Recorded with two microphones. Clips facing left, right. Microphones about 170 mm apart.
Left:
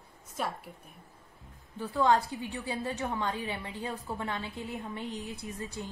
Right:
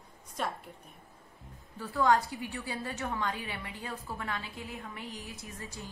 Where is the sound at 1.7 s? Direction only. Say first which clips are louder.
Left 1 dB; 25° left (ahead or behind).